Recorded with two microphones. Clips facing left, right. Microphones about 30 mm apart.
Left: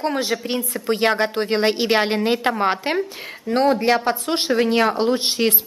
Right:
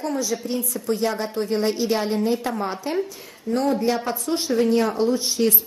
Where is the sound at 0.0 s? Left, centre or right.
Left.